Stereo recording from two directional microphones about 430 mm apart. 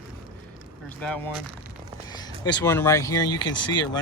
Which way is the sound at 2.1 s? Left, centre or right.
Centre.